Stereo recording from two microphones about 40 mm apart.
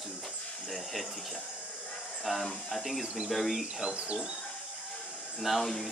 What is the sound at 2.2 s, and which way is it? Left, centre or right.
A man's voice, centre.